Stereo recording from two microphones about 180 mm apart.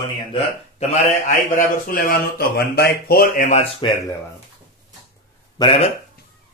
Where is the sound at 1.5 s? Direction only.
50° left (ahead or behind).